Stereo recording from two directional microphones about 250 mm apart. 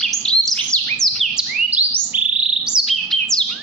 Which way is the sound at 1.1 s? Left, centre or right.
Centre.